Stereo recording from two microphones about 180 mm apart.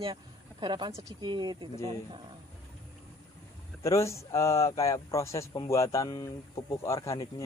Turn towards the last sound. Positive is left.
turn(degrees=15)  # may be behind; listen again after turning